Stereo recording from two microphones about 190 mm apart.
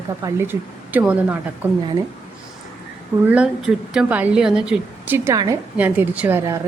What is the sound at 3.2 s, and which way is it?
A woman's voice, 5° right (ahead or behind).